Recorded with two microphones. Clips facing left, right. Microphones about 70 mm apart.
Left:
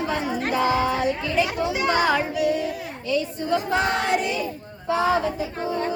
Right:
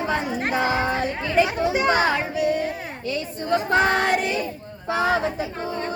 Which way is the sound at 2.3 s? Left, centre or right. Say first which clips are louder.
Even; right.